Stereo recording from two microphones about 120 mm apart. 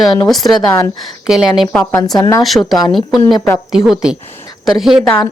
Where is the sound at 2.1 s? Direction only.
30° left (ahead or behind).